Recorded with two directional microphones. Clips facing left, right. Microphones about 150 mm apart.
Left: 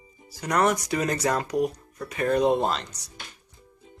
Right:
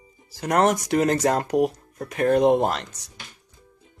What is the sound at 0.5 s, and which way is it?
Speech, 80° right.